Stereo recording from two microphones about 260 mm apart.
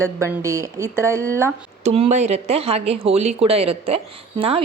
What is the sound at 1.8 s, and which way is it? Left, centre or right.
Speech, right.